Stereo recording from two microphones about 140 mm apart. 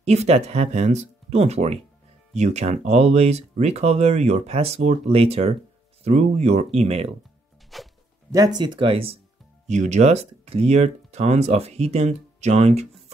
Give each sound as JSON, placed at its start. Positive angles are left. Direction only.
{"t": 0.0, "sound": "speech", "side_deg": -50}
{"t": 7.7, "sound": "music", "side_deg": 0}
{"t": 8.3, "sound": "speech", "side_deg": -25}
{"t": 9.7, "sound": "speech", "side_deg": -55}